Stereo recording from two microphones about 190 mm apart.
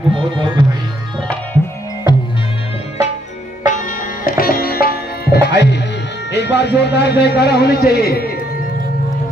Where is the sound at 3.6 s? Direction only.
40° left (ahead or behind).